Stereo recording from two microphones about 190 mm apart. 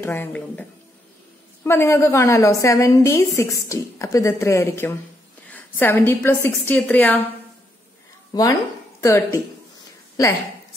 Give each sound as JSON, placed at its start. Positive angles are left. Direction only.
{"t": 0.0, "sound": "a woman's voice", "side_deg": 10}
{"t": 8.3, "sound": "a woman's voice", "side_deg": 20}